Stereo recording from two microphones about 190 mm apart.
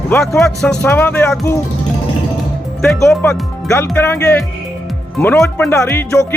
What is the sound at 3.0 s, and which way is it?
Speech, 5° left (ahead or behind).